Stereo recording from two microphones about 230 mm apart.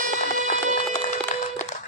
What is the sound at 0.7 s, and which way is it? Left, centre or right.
Wood, left.